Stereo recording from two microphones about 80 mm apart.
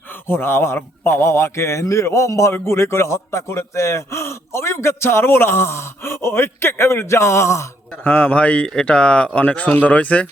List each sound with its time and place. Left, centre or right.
0.3 s a man's voice: left
8.0 s speech: centre